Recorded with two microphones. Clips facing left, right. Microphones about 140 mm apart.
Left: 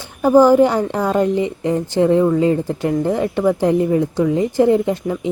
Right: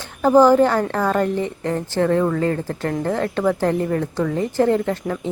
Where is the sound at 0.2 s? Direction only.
10° left (ahead or behind).